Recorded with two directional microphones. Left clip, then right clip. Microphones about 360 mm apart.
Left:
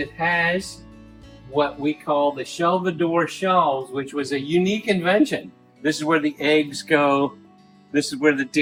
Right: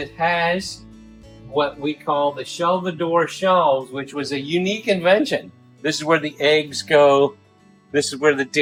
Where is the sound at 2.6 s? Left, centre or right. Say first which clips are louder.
Even; centre.